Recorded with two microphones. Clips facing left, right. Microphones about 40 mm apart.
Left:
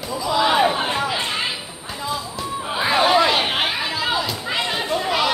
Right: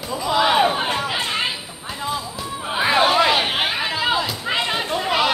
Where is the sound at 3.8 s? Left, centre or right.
Centre.